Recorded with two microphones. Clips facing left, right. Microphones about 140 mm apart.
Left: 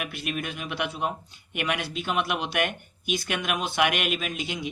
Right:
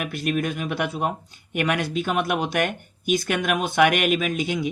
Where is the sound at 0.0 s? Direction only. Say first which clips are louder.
Right 7 dB; 45° right (ahead or behind).